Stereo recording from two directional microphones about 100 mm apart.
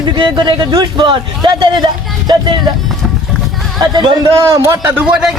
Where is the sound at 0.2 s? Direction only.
55° right (ahead or behind).